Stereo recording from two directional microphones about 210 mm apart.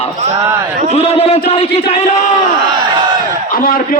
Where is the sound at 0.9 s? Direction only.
30° left (ahead or behind).